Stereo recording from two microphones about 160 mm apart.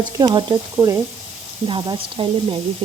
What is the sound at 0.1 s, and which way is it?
A woman's voice, 20° right (ahead or behind).